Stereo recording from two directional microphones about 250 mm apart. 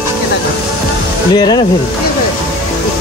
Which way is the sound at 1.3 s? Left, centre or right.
Centre.